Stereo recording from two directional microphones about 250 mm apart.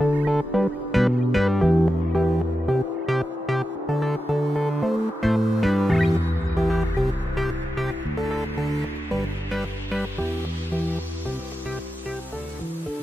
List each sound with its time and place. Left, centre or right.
0.0 s music: centre